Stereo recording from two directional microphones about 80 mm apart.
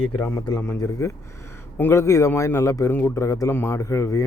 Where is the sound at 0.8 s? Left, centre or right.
Left.